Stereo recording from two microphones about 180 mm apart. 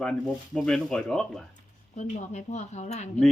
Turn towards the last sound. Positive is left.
turn(degrees=40)  # may be behind; listen again after turning